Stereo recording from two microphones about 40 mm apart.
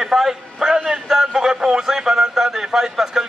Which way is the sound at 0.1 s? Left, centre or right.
Centre.